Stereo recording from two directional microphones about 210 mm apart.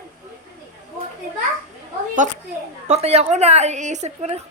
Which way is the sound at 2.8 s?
30° right (ahead or behind).